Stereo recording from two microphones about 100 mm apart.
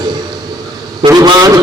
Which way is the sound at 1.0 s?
60° right (ahead or behind).